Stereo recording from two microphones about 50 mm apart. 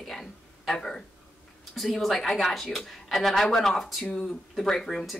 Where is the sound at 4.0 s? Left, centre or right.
Centre.